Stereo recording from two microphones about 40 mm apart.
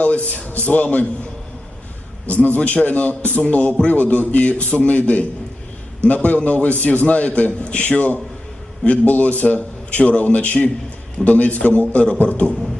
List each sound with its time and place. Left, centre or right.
0.0 s a man's voice: left
2.3 s a man's voice: left